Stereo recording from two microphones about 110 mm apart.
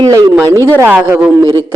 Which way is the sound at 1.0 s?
15° right (ahead or behind).